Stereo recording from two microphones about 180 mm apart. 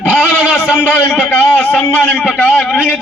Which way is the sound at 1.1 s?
10° left (ahead or behind).